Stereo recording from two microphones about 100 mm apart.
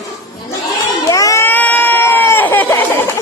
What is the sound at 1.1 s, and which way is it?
Crowd, 35° left (ahead or behind).